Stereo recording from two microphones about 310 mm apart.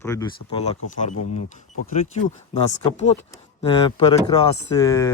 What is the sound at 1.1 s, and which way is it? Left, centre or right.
Speech, left.